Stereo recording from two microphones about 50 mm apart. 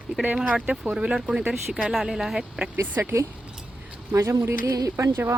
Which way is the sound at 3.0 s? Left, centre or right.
Right.